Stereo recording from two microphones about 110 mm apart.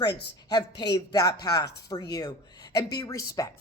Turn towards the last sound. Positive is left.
turn(degrees=30)  # may be behind; listen again after turning